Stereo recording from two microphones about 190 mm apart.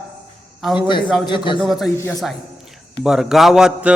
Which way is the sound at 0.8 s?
25° left (ahead or behind).